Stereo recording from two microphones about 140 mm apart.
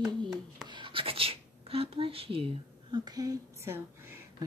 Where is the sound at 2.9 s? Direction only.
30° right (ahead or behind).